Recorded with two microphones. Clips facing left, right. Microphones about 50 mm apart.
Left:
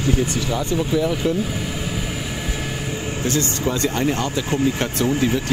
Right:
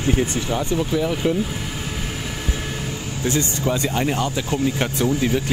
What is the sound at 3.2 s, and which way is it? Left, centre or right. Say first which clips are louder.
Speech: even; right.